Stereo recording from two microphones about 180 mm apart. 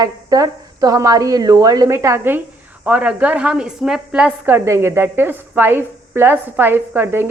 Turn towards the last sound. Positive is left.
turn(degrees=-10)  # may be behind; listen again after turning